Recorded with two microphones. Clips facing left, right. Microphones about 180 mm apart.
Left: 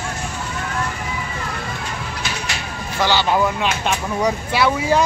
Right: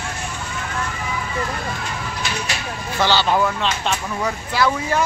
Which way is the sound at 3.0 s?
10° left (ahead or behind).